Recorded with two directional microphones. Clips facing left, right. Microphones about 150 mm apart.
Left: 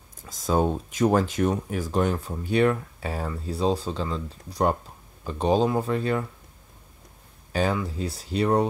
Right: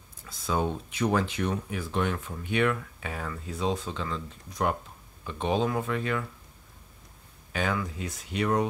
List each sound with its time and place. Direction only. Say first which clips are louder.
0.2 s speech: left 5 dB; 40° left (ahead or behind)
7.5 s speech: left 5 dB; 35° left (ahead or behind)